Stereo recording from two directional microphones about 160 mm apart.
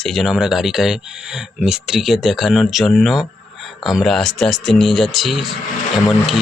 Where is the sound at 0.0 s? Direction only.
Centre (ahead or behind).